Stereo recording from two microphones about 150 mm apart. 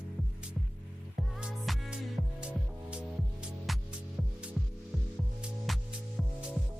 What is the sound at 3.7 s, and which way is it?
Music, centre (ahead or behind).